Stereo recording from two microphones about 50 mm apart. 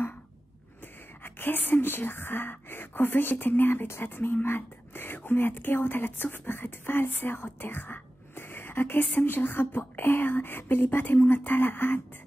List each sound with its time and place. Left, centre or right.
1.2 s speech: left